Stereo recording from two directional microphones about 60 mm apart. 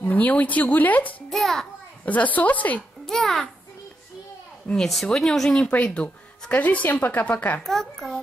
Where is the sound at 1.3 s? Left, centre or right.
Centre.